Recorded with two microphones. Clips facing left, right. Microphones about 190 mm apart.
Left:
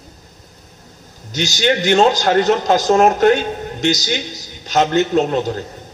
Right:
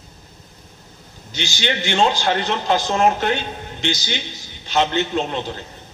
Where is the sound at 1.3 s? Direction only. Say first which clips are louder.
Left 7 dB; 45° left (ahead or behind).